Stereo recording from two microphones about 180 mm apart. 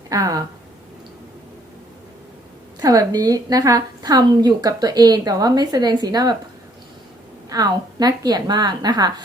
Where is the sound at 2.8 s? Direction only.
20° right (ahead or behind).